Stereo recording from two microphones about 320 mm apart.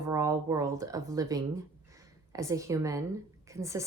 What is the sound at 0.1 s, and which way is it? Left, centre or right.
Speech, centre.